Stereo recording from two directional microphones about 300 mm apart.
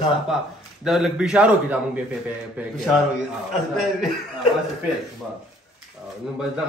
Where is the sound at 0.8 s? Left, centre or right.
Centre.